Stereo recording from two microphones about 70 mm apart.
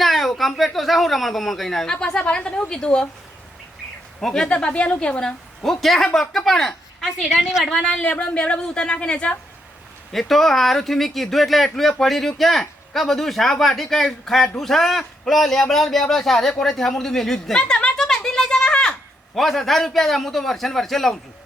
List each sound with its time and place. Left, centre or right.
0.0 s speech: centre
4.2 s a woman's voice: centre
7.9 s a woman's voice: centre
10.1 s speech: centre
17.6 s a sound: centre
19.4 s speech: centre